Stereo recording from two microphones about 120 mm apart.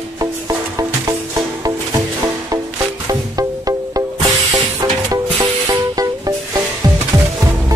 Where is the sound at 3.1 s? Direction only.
30° right (ahead or behind).